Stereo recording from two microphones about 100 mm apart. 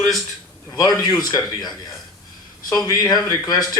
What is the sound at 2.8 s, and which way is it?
Speech, 40° left (ahead or behind).